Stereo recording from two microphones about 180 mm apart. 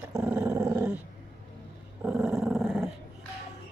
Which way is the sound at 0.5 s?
20° right (ahead or behind).